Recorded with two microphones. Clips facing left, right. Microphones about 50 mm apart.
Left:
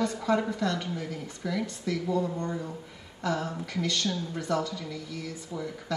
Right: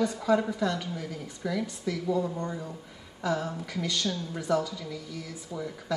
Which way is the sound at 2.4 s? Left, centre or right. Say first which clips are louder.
Left 2 dB; centre.